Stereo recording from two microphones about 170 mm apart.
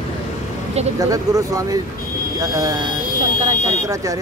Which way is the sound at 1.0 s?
20° right (ahead or behind).